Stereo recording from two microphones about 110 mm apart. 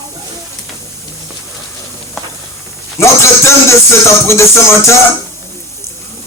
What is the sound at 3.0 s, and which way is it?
Music, 25° left (ahead or behind).